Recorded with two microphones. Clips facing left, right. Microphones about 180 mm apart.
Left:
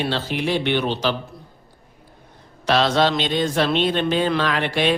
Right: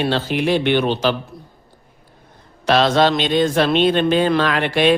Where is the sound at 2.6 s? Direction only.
50° right (ahead or behind).